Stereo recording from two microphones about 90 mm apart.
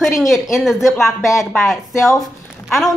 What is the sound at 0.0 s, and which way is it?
A woman's voice, centre (ahead or behind).